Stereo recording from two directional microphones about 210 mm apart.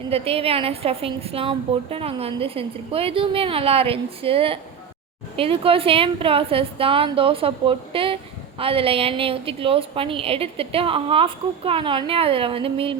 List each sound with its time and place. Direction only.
0.1 s a woman's voice: 25° right (ahead or behind)